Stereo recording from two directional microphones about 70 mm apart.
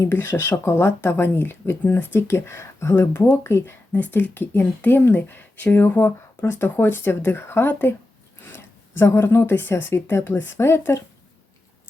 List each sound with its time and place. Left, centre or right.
0.0 s speech: left